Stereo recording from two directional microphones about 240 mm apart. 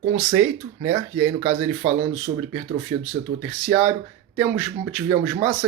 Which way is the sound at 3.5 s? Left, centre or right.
Centre.